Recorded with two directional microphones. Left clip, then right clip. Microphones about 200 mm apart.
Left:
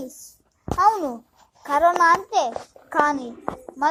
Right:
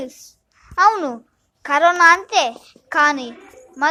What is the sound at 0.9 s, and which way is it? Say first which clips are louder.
Speech: right 2 dB; 30° right (ahead or behind).